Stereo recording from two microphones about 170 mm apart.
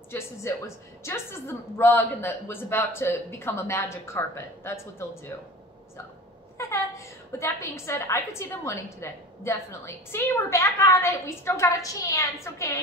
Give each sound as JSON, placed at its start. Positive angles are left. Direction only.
{"t": 0.1, "sound": "a woman's voice", "side_deg": 15}
{"t": 6.6, "sound": "a woman's voice", "side_deg": 15}